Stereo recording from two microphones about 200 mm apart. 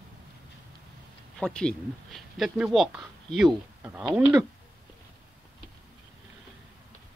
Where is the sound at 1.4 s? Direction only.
5° left (ahead or behind).